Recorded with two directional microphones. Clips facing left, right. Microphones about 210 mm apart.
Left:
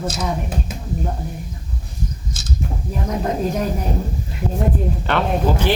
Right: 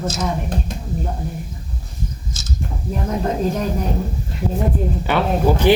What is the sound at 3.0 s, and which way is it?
Speech, centre (ahead or behind).